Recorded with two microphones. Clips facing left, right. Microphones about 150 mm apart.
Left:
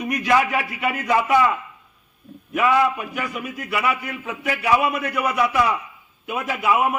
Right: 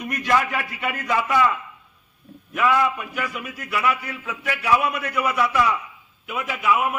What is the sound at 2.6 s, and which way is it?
Speech, 10° left (ahead or behind).